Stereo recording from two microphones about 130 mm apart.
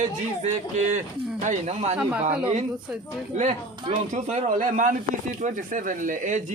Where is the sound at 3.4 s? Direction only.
65° right (ahead or behind).